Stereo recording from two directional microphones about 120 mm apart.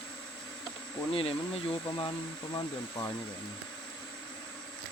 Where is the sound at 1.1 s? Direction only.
55° left (ahead or behind).